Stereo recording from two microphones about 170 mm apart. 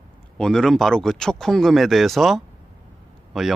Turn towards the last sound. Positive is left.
turn(degrees=0)  # may be behind; listen again after turning